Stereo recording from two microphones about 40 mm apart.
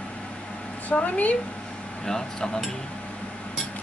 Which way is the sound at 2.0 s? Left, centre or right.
Centre.